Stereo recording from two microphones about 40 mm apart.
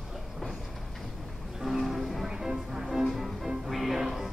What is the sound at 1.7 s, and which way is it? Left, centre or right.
Music, centre.